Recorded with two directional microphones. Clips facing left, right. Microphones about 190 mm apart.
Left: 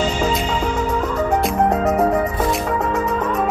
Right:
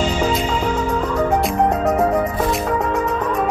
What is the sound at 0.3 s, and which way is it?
Music, centre (ahead or behind).